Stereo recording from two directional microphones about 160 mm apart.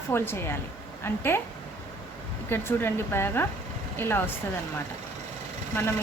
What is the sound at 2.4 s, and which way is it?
Speech, 15° left (ahead or behind).